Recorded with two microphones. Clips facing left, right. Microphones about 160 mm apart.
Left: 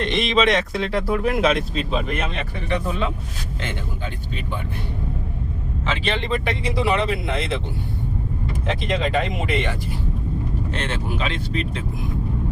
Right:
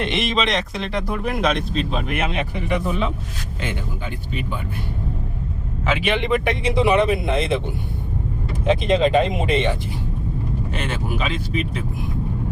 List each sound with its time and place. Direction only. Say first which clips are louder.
0.0 s speech: left 2 dB; 5° right (ahead or behind)
5.8 s speech: right 4 dB; 10° right (ahead or behind)
8.6 s speech: right 7 dB; 20° right (ahead or behind)
10.7 s speech: even; 5° right (ahead or behind)